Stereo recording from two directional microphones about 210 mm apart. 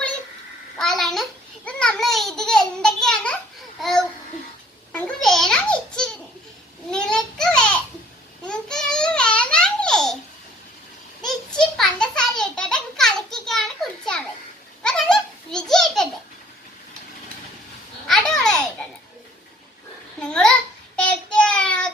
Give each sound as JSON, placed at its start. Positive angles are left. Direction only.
{"t": 0.8, "sound": "babbling", "side_deg": 0}
{"t": 4.9, "sound": "a sound", "side_deg": 5}
{"t": 8.4, "sound": "babbling", "side_deg": 5}
{"t": 11.2, "sound": "a sound", "side_deg": 0}
{"t": 14.8, "sound": "baby laughter", "side_deg": 5}
{"t": 18.1, "sound": "babbling", "side_deg": 5}
{"t": 20.1, "sound": "babbling", "side_deg": 5}
{"t": 20.9, "sound": "child singing", "side_deg": 5}